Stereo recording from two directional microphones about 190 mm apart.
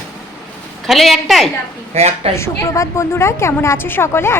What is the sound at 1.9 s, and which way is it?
Speech, 35° right (ahead or behind).